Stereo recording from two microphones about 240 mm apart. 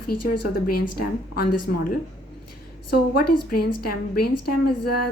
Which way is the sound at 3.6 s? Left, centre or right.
Left.